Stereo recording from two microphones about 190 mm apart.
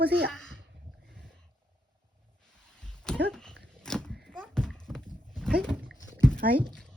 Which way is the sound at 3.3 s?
5° left (ahead or behind).